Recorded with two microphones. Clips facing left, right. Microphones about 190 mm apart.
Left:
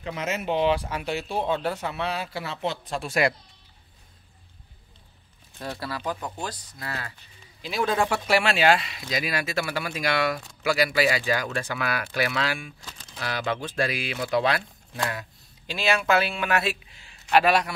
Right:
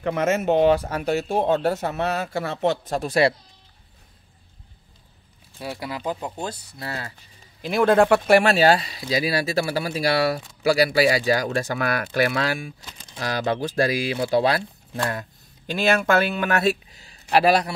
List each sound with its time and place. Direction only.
0.0 s speech: 55° right (ahead or behind); by 3.3 s 30° right (ahead or behind)
5.6 s speech: 15° right (ahead or behind)
7.6 s speech: 55° right (ahead or behind); by 14.6 s 35° right (ahead or behind)
15.0 s speech: 45° right (ahead or behind)